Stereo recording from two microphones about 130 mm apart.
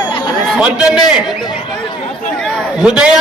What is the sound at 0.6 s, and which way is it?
Speech, 5° right (ahead or behind).